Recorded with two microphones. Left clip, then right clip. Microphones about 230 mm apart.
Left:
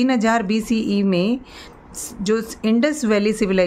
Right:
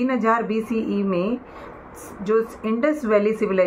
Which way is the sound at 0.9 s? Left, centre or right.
Left.